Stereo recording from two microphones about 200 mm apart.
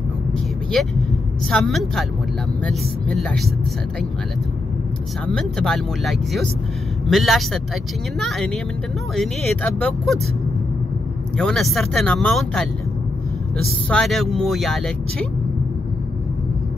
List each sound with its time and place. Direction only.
0.3 s vehicle: 5° left (ahead or behind)
1.5 s speech: centre (ahead or behind)
5.2 s speech: 5° left (ahead or behind)
11.3 s speech: centre (ahead or behind)
13.8 s speech: 5° left (ahead or behind)